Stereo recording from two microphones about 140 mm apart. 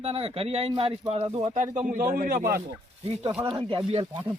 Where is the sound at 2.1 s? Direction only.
80° right.